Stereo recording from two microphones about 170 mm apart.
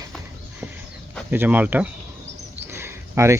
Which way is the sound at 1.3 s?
10° right (ahead or behind).